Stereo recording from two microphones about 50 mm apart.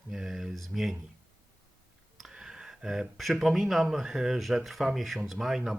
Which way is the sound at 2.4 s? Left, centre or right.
Centre.